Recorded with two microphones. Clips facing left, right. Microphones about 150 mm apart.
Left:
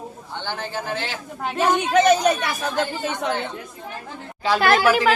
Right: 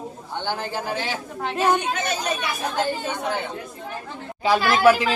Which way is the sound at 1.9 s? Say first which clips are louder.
Left 10 dB; 90° left.